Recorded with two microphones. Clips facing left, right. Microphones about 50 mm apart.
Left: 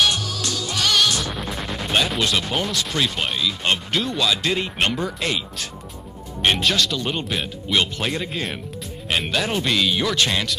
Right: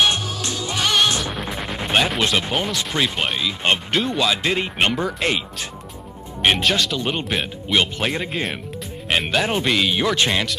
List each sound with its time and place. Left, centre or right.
0.0 s music: right
1.2 s music: centre
2.2 s speech: right
6.4 s speech: centre
9.1 s speech: centre
9.4 s speech: right